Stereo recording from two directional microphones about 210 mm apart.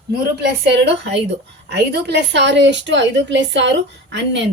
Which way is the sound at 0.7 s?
55° right (ahead or behind).